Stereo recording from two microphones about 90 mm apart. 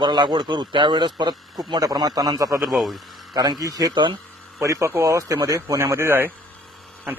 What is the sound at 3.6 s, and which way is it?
Speech, 40° right (ahead or behind).